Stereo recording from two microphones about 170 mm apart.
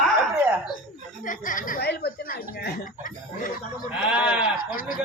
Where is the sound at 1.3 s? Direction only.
50° left (ahead or behind); by 2.1 s 70° left (ahead or behind).